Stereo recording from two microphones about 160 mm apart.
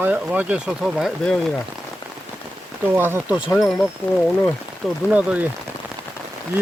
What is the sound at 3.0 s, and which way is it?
Speech, 15° right (ahead or behind).